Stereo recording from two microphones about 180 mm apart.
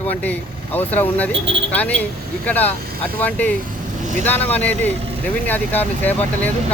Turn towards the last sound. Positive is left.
turn(degrees=10)  # may be behind; listen again after turning